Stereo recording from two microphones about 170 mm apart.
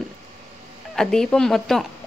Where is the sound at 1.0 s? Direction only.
5° left (ahead or behind).